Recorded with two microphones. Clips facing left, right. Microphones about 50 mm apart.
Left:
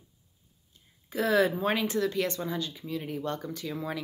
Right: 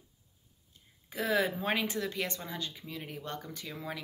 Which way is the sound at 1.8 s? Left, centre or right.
Right.